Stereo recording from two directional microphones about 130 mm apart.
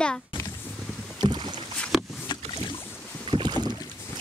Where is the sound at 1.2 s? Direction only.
35° right (ahead or behind).